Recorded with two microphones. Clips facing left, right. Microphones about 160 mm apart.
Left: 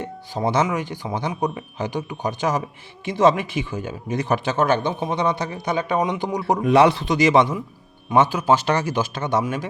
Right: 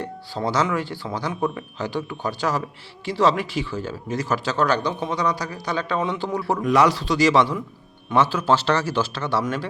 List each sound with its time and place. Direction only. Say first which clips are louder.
0.0 s a man's voice: left 2 dB; 20° left (ahead or behind)